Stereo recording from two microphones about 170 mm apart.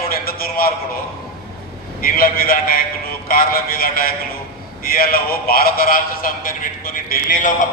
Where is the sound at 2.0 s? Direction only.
60° left (ahead or behind).